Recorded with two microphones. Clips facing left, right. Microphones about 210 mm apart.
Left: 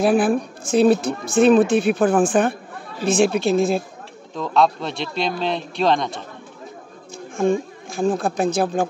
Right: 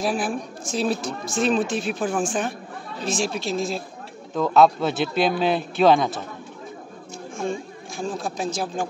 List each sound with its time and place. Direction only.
0.0 s a woman's voice: 60° left (ahead or behind)
4.3 s speech: 5° right (ahead or behind)
8.0 s a woman's voice: 55° left (ahead or behind)